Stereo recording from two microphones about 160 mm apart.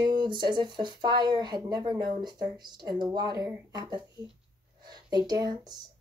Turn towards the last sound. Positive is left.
turn(degrees=-25)  # may be behind; listen again after turning